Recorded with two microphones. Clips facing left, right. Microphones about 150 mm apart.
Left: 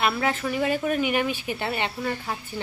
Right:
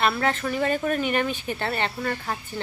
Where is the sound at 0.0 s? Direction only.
5° left (ahead or behind).